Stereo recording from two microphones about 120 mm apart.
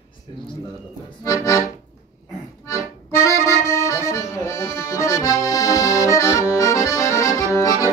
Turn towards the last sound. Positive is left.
turn(degrees=25)  # may be behind; listen again after turning